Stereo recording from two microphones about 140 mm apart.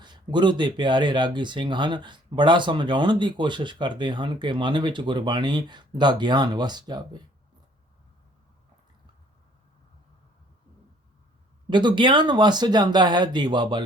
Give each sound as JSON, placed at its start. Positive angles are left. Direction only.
{"t": 0.0, "sound": "speech", "side_deg": -30}
{"t": 11.7, "sound": "speech", "side_deg": -35}